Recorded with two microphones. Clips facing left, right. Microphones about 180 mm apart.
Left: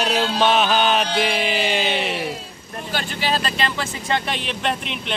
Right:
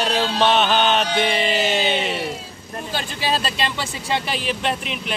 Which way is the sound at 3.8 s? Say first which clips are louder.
Left 1 dB; 5° right (ahead or behind).